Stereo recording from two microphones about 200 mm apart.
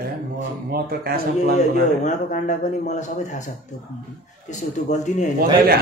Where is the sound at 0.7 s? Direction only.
50° right (ahead or behind).